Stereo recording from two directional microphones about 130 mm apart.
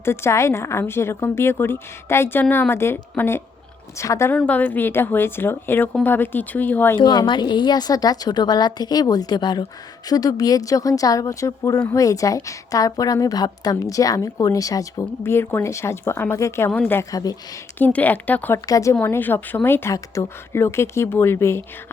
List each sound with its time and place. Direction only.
0.0 s a woman's voice: 20° left (ahead or behind)
4.4 s speech: 10° left (ahead or behind)
7.0 s a woman's voice: 35° left (ahead or behind)
17.7 s speech: 15° left (ahead or behind)
18.6 s a woman's voice: 25° left (ahead or behind)
18.9 s a woman's voice: 15° left (ahead or behind)